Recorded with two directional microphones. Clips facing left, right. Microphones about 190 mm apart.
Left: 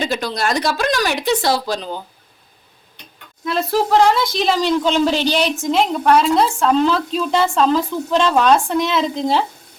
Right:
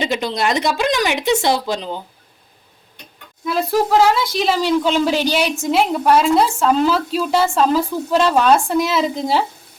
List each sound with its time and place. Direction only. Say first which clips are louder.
0.0 s speech: right 1 dB; 20° right (ahead or behind)
3.4 s speech: right 1 dB; 5° right (ahead or behind)